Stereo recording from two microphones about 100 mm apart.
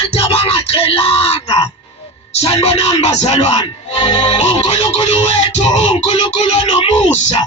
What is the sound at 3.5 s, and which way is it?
Speech, 50° left (ahead or behind).